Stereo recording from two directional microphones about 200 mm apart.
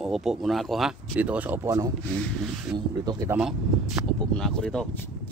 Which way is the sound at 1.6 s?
20° right (ahead or behind).